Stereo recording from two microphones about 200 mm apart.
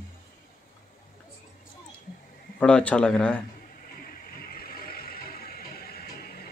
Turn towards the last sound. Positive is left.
turn(degrees=50)  # may be behind; listen again after turning